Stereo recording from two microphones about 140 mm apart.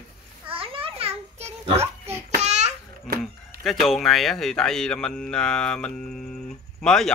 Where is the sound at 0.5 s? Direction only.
40° right (ahead or behind).